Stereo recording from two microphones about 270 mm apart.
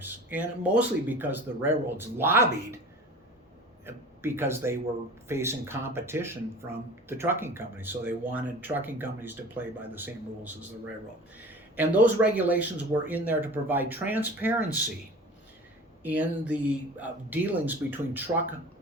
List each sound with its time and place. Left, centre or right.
0.0 s speech: centre
3.8 s speech: centre
11.8 s speech: centre
16.0 s speech: centre